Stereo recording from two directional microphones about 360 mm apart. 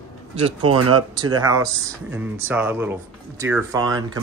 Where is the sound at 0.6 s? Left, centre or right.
Right.